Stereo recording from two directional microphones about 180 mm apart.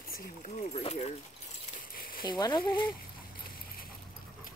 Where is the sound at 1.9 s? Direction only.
55° left (ahead or behind).